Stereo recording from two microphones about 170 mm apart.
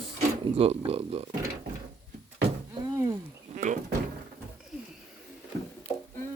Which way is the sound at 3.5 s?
45° right (ahead or behind).